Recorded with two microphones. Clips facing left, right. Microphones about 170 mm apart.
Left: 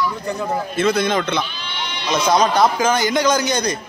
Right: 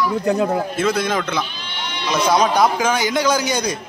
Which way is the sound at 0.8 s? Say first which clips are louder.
Left 5 dB; 5° right (ahead or behind).